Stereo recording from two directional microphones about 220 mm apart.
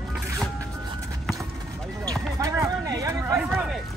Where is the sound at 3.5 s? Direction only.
Centre (ahead or behind).